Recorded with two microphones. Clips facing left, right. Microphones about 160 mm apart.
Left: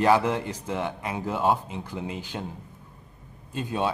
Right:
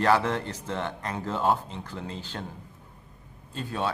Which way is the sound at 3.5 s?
15° left (ahead or behind).